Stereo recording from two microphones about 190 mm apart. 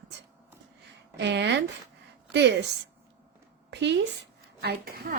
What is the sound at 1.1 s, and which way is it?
Speech, 65° right (ahead or behind).